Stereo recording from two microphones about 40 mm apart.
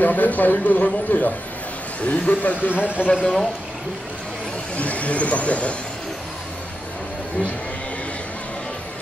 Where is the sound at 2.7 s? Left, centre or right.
Right.